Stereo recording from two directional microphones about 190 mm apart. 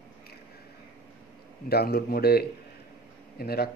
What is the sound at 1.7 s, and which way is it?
Speech, 55° left (ahead or behind).